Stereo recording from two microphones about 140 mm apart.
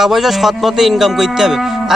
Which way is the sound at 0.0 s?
Centre (ahead or behind).